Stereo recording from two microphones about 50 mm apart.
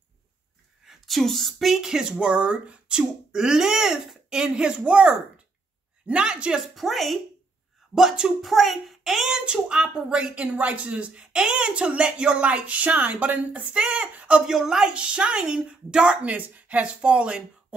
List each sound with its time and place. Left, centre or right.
0.8 s a woman's voice: centre
2.1 s speech: right
3.0 s speech: centre
6.1 s speech: centre
6.7 s a woman's voice: centre
9.5 s speech: centre
14.4 s speech: centre
15.0 s speech: right